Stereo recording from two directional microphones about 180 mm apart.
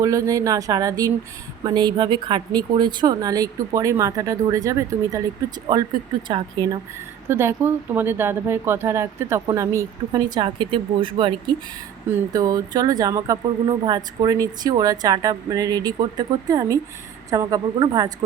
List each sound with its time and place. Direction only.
0.0 s speech: 20° right (ahead or behind)
7.3 s speech: 15° right (ahead or behind)